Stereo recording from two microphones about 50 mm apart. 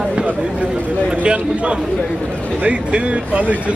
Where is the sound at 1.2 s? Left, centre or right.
Right.